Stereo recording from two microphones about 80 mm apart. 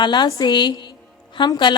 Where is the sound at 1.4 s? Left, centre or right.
Left.